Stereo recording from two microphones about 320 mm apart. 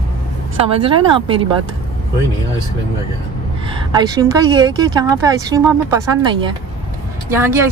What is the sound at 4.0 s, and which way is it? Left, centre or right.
Speech, centre.